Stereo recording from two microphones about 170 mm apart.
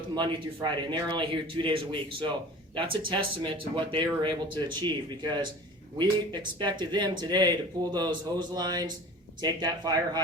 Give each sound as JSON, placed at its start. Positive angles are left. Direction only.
{"t": 0.2, "sound": "speech", "side_deg": -25}